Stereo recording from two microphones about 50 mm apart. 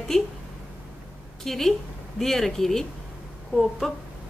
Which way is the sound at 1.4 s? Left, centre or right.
Centre.